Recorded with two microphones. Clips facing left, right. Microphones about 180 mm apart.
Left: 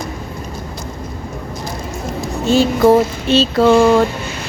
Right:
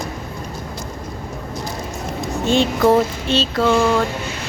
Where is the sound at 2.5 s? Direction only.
5° left (ahead or behind).